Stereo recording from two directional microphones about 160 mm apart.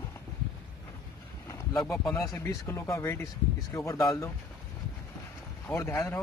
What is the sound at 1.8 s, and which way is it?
Speech, centre (ahead or behind).